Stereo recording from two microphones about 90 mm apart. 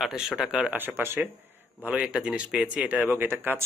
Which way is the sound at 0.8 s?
25° right (ahead or behind).